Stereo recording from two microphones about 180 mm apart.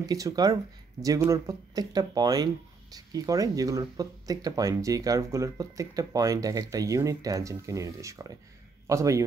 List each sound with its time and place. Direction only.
0.0 s a man's voice: 20° right (ahead or behind)